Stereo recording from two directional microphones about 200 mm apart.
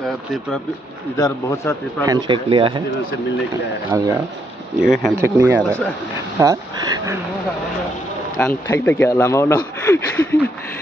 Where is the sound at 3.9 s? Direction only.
15° right (ahead or behind).